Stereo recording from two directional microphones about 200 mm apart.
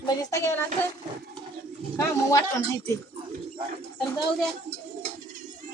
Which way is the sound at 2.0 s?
15° left (ahead or behind).